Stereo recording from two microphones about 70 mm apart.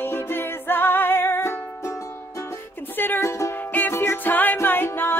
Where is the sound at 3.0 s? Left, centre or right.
Left.